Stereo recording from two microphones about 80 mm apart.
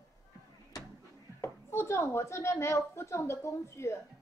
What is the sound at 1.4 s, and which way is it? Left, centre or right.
A woman's voice, left.